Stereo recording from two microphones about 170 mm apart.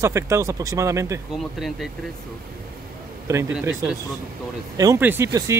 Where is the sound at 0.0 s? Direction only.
15° right (ahead or behind).